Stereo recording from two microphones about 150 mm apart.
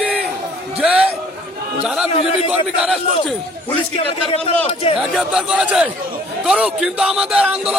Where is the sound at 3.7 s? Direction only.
45° left (ahead or behind).